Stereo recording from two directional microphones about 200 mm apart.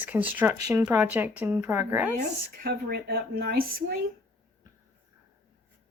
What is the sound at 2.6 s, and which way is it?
Speech, 50° right (ahead or behind).